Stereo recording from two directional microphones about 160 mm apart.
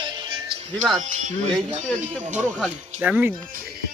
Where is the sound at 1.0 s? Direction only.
50° right (ahead or behind).